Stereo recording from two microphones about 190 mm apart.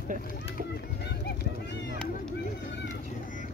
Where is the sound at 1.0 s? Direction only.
60° left (ahead or behind).